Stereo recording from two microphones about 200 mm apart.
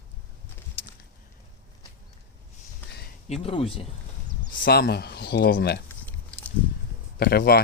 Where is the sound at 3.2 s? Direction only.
30° left (ahead or behind).